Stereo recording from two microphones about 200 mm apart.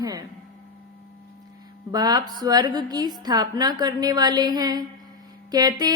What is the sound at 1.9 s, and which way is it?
A woman's voice, 20° right (ahead or behind).